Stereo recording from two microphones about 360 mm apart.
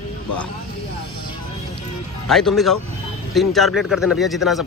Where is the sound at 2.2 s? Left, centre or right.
Centre.